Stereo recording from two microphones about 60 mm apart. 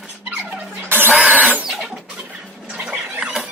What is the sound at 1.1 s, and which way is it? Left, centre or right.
Printer, right.